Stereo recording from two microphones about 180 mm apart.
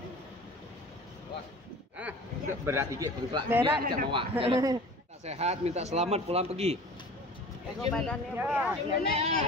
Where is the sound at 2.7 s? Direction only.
15° right (ahead or behind); by 6.7 s 35° right (ahead or behind).